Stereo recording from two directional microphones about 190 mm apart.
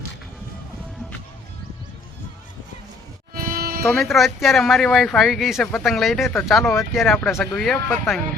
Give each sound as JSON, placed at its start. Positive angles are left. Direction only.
{"t": 3.3, "sound": "sheep", "side_deg": -50}
{"t": 3.8, "sound": "speech", "side_deg": 0}